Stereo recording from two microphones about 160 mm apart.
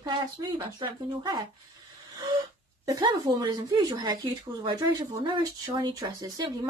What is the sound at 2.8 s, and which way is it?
Speech, 25° right (ahead or behind).